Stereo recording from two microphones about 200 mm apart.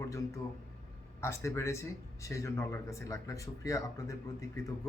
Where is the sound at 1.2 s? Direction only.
15° left (ahead or behind).